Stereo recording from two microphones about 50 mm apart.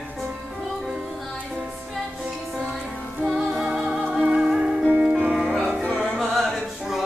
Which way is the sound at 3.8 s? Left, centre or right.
Right.